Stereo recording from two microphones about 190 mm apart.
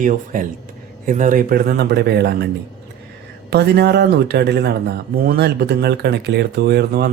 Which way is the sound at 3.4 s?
60° right (ahead or behind).